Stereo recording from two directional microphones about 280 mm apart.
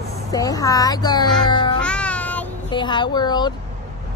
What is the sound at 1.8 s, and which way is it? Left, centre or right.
Music, centre.